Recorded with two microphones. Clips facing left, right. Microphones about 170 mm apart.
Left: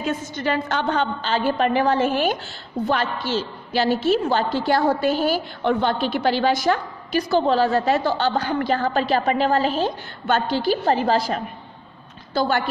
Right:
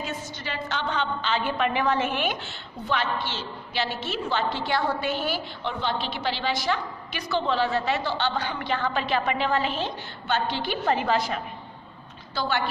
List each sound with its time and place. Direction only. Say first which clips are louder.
0.0 s a woman's voice: left 9 dB; 50° left (ahead or behind); by 11.4 s 35° left (ahead or behind)
12.4 s a woman's voice: left 6 dB; 45° left (ahead or behind)